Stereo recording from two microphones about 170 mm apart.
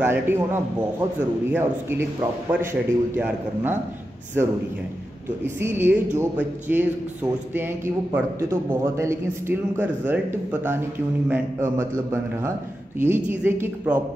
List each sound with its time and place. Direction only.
0.0 s a man's voice: 15° right (ahead or behind)
5.6 s a man's voice: 15° right (ahead or behind)